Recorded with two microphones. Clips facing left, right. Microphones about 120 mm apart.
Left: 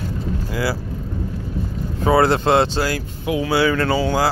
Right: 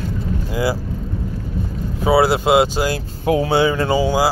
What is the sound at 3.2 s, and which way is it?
Speech, 40° right (ahead or behind).